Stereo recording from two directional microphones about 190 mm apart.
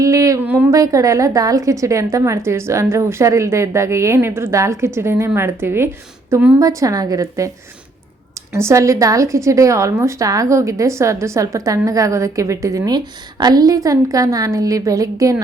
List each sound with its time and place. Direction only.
0.0 s a woman's voice: 15° right (ahead or behind)
8.5 s a woman's voice: 15° right (ahead or behind)